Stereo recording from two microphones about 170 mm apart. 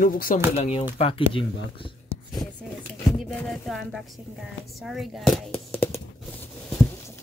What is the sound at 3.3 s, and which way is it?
Speech, centre (ahead or behind).